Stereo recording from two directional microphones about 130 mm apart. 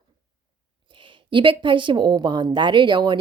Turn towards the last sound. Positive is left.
turn(degrees=-35)  # may be behind; listen again after turning